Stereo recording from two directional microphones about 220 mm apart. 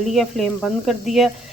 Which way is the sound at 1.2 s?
Centre (ahead or behind).